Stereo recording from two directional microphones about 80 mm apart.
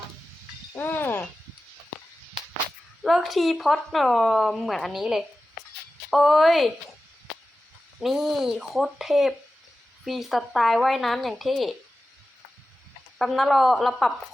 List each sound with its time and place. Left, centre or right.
0.8 s a sound: left
3.0 s a woman's voice: centre
7.9 s a woman's voice: centre
13.1 s a woman's voice: centre